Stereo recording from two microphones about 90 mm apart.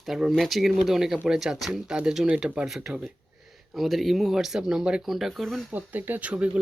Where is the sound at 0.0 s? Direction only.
5° right (ahead or behind).